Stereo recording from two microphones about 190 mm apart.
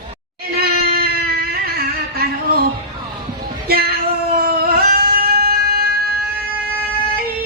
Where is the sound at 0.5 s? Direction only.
55° right (ahead or behind).